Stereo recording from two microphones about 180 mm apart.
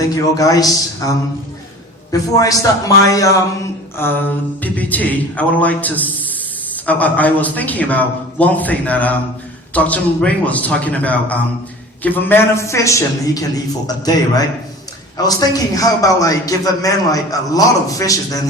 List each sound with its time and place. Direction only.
0.3 s a man's voice: 20° left (ahead or behind)